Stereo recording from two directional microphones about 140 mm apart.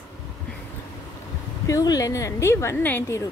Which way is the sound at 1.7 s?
25° left (ahead or behind).